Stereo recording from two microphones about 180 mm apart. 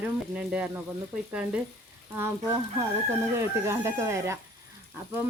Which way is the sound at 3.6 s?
15° right (ahead or behind).